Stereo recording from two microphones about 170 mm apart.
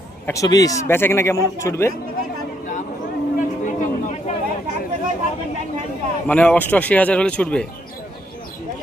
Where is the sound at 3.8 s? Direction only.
45° left (ahead or behind).